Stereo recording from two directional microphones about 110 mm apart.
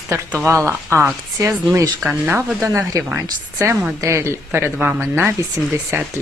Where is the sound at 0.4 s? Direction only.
25° right (ahead or behind).